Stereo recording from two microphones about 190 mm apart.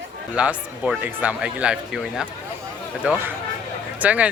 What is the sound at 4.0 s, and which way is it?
Speech, 5° right (ahead or behind).